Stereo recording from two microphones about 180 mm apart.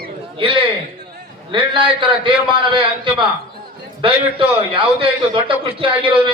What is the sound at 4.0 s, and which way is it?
A man's voice, 30° right (ahead or behind).